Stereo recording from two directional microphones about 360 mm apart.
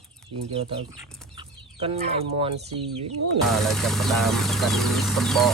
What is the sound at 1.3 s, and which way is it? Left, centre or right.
Chicken, centre.